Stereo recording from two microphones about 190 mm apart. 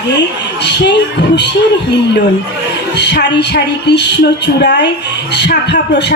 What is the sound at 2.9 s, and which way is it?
Speech, 60° left (ahead or behind).